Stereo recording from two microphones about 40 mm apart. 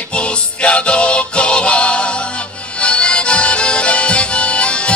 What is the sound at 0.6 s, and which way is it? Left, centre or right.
Music, left.